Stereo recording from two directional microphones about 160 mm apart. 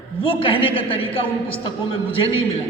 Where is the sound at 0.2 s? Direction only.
35° left (ahead or behind).